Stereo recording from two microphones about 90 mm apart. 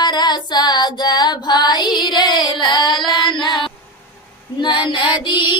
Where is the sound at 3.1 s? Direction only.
60° left (ahead or behind).